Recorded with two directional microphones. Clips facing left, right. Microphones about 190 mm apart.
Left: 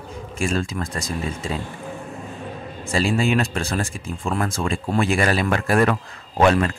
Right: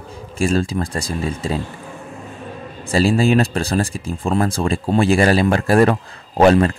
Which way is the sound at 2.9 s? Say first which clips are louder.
Right 5 dB; 35° right (ahead or behind).